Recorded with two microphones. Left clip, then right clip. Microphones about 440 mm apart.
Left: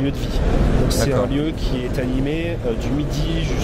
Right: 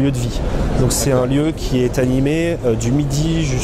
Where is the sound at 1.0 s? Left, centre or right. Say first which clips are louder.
Right 4 dB; right.